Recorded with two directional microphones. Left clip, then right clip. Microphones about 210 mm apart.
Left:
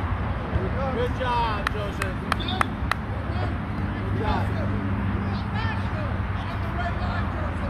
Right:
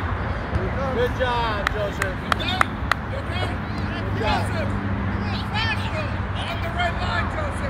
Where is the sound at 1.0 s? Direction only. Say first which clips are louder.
Right 3 dB; 45° left (ahead or behind).